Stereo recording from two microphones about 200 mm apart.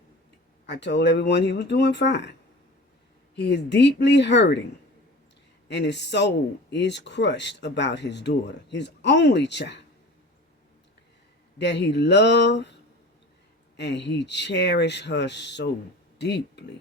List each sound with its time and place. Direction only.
0.7 s speech: 60° left (ahead or behind)
3.3 s speech: 55° left (ahead or behind)
5.6 s speech: 60° left (ahead or behind)
11.5 s speech: 60° left (ahead or behind)
13.7 s speech: 60° left (ahead or behind)